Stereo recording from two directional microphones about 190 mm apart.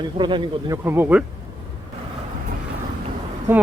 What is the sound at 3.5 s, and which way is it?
Speech, 10° right (ahead or behind).